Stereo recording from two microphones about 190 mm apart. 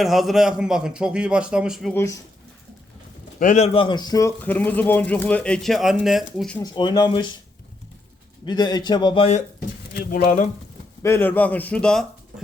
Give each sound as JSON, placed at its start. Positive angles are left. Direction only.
{"t": 0.0, "sound": "a man's voice", "side_deg": 0}
{"t": 1.9, "sound": "speech", "side_deg": 10}
{"t": 3.4, "sound": "a man's voice", "side_deg": 40}
{"t": 6.6, "sound": "a man's voice", "side_deg": 20}
{"t": 8.4, "sound": "a man's voice", "side_deg": 20}
{"t": 10.1, "sound": "speech", "side_deg": 45}
{"t": 11.0, "sound": "speech", "side_deg": 10}